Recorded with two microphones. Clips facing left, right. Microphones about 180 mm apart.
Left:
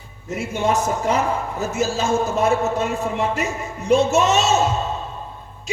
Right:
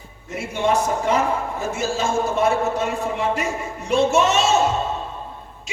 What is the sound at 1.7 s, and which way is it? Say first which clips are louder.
Music: left 2 dB; 40° left (ahead or behind).